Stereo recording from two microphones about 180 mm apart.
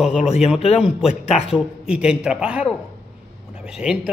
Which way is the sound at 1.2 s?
35° left (ahead or behind).